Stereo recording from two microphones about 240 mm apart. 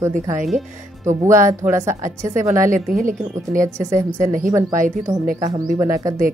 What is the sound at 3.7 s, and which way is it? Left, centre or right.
Speech, centre.